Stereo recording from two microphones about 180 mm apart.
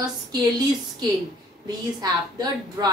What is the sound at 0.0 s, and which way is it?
Speech, 20° right (ahead or behind).